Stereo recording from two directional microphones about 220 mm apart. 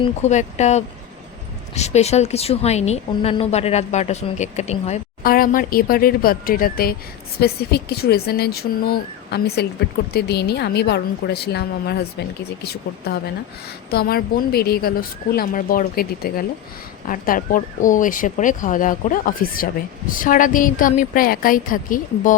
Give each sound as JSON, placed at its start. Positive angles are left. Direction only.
{"t": 0.0, "sound": "a woman's voice", "side_deg": 30}